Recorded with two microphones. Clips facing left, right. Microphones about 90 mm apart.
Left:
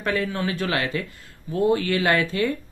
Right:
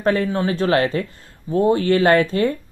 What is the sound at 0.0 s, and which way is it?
Speech, 35° right (ahead or behind).